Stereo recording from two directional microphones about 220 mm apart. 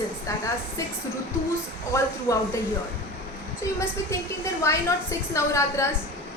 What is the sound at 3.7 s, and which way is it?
A woman's voice, 15° left (ahead or behind).